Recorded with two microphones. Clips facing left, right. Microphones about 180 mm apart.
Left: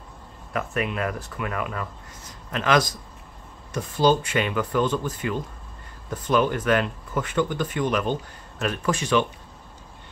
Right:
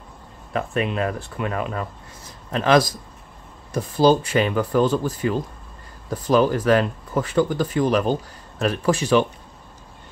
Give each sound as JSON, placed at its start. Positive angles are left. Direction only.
{"t": 0.5, "sound": "speech", "side_deg": -30}